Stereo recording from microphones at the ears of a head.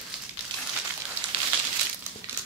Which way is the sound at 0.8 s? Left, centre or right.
Right.